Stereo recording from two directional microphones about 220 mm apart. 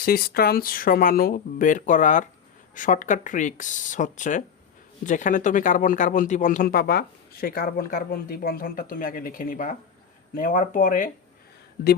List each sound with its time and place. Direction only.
0.0 s speech: 45° left (ahead or behind)